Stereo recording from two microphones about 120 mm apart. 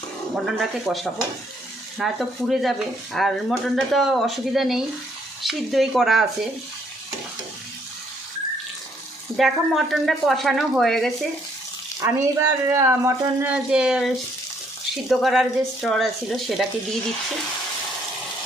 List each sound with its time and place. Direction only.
0.4 s speech: centre (ahead or behind)
9.4 s speech: centre (ahead or behind)
12.0 s speech: 20° right (ahead or behind)
13.7 s speech: 5° right (ahead or behind)
15.1 s speech: centre (ahead or behind)